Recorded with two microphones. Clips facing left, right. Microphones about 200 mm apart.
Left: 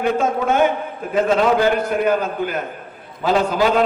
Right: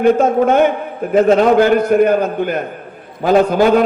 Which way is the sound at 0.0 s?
40° right (ahead or behind).